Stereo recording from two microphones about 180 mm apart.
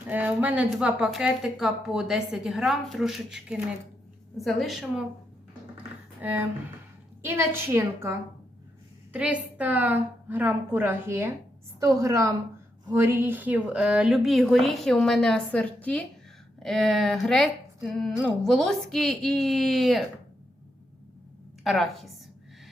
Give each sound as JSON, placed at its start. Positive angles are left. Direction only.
{"t": 0.1, "sound": "a woman's voice", "side_deg": -10}
{"t": 6.1, "sound": "a woman's voice", "side_deg": -10}
{"t": 9.1, "sound": "a woman's voice", "side_deg": -10}
{"t": 21.6, "sound": "a woman's voice", "side_deg": 0}